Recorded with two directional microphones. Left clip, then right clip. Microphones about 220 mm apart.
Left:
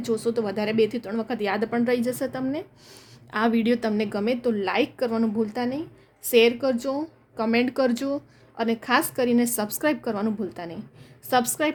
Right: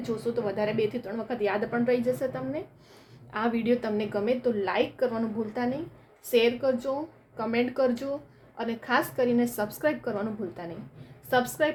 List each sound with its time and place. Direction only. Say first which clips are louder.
0.0 s speech: left 4 dB; 50° left (ahead or behind)